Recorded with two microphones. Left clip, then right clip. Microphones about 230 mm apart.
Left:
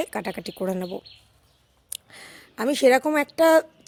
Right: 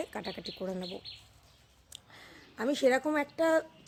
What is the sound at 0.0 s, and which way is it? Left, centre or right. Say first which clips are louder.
A woman's voice: left 9 dB; left.